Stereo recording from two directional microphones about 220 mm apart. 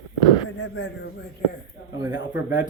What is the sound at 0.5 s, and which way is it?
Speech, 60° left (ahead or behind).